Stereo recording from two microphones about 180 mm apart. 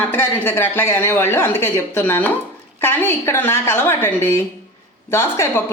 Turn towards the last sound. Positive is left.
turn(degrees=15)  # may be behind; listen again after turning